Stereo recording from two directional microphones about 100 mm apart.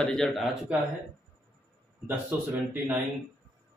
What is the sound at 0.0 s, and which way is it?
Speech, 5° left (ahead or behind).